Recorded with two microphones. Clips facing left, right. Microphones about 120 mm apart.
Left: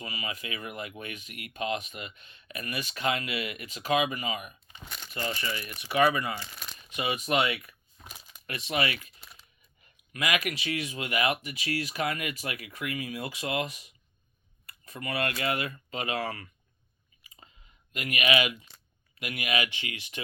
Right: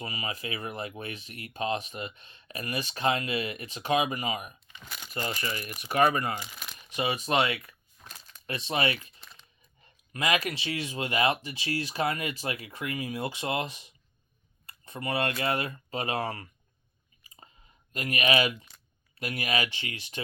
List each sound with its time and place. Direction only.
0.0 s speech: 40° right (ahead or behind)
4.9 s crumpling: 5° right (ahead or behind)
5.8 s speech: 45° right (ahead or behind)
6.5 s crumpling: 5° right (ahead or behind)
6.9 s speech: 30° right (ahead or behind)
8.0 s a sound: 10° left (ahead or behind)
8.4 s speech: 35° right (ahead or behind)
9.2 s a sound: 10° left (ahead or behind)
9.8 s speech: 30° right (ahead or behind)
17.9 s speech: 35° right (ahead or behind)